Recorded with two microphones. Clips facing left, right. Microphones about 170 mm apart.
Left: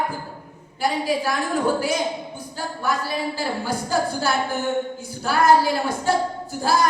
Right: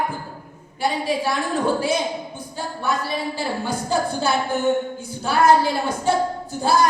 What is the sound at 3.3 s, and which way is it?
A woman's voice, 25° right (ahead or behind).